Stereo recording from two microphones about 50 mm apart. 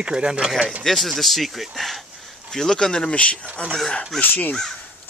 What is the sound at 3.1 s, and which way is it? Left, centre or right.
Speech, left.